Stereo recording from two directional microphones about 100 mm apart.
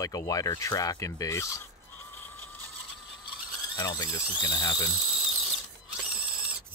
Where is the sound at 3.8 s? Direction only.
30° left (ahead or behind).